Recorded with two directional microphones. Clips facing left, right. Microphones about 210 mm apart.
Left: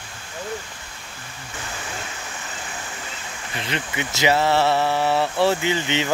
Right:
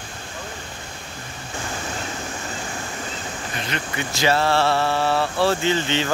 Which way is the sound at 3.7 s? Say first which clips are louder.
Left 2 dB; 20° left (ahead or behind).